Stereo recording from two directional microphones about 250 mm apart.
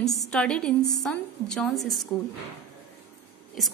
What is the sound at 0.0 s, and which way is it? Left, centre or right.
A woman's voice, centre.